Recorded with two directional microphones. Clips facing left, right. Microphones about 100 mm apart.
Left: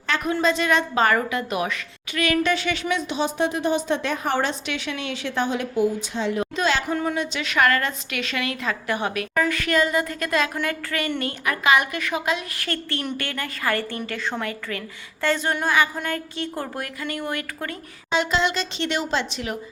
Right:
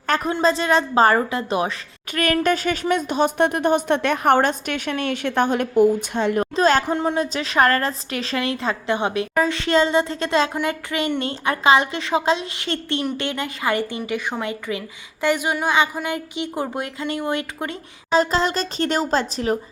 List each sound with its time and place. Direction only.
0.3 s a woman's voice: 30° right (ahead or behind)
2.1 s a woman's voice: 45° right (ahead or behind)
6.6 s a woman's voice: 40° right (ahead or behind)
6.9 s a woman's voice: 30° right (ahead or behind)
18.1 s a woman's voice: 40° right (ahead or behind)